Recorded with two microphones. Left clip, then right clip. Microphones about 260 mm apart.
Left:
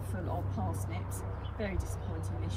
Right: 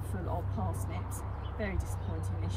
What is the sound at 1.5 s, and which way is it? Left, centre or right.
Speech, centre.